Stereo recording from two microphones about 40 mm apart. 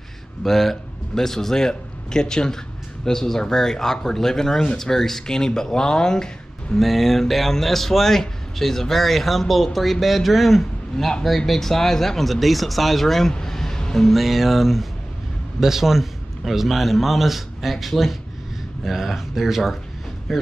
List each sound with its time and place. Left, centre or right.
0.4 s a man's voice: centre
6.8 s speech: centre
13.3 s a sound: centre
14.0 s speech: centre